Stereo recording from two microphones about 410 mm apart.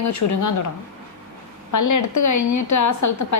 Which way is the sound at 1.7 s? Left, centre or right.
Left.